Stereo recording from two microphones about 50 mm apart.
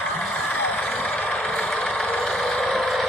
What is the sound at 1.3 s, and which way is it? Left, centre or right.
Vehicle, left.